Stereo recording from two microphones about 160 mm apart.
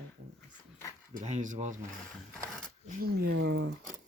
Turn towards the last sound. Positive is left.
turn(degrees=-90)